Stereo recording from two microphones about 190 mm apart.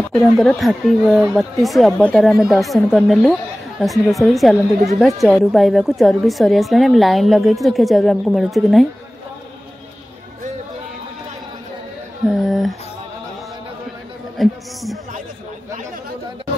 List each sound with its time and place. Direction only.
0.1 s a woman's voice: centre (ahead or behind)
12.3 s a woman's voice: centre (ahead or behind)
14.4 s a woman's voice: centre (ahead or behind)